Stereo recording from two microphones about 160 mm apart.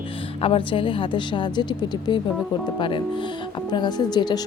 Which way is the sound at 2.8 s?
30° left (ahead or behind).